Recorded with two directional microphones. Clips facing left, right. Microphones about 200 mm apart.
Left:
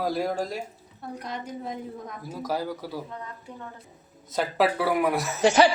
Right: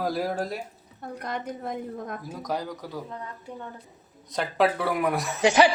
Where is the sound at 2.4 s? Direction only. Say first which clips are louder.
Left 3 dB; 5° left (ahead or behind).